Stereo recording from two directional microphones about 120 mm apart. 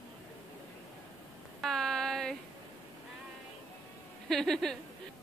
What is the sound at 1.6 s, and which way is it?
Child singing, 5° left (ahead or behind).